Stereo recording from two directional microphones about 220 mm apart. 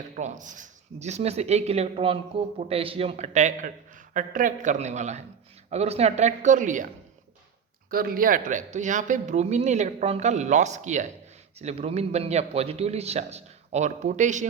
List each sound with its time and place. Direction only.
0.2 s speech: 35° right (ahead or behind)